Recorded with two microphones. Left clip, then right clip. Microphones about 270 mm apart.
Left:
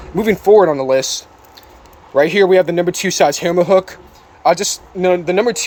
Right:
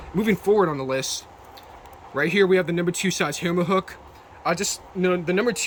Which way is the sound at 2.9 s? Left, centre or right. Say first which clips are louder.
Left 11 dB; centre.